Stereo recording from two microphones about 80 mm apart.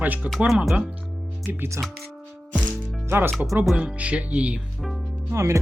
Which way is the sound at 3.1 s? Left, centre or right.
Right.